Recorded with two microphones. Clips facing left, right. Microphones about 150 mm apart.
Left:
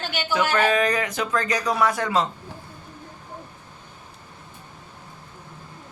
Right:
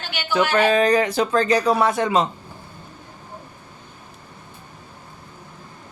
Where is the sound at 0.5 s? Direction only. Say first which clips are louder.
Right 5 dB; 30° right (ahead or behind).